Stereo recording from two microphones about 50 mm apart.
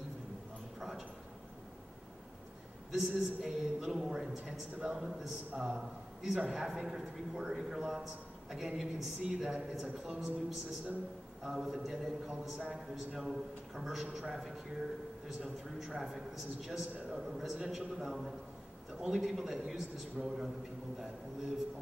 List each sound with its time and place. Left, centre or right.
0.7 s a sound: centre
2.9 s a man's voice: centre
4.9 s a man's voice: centre